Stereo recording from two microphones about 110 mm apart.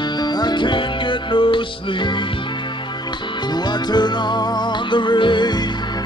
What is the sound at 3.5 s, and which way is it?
Music, 40° left (ahead or behind).